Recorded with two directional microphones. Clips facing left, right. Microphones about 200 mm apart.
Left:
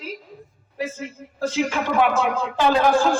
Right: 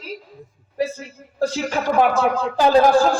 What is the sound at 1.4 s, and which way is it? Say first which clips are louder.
A man's voice: right 2 dB; 40° right (ahead or behind).